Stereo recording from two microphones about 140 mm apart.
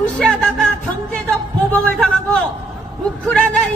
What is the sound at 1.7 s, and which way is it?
Music, 5° left (ahead or behind).